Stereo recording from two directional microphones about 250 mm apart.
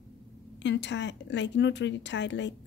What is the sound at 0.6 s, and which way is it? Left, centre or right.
Speech, left.